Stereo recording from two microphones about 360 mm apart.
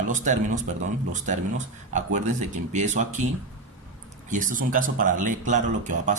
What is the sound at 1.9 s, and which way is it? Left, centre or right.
Speech, centre.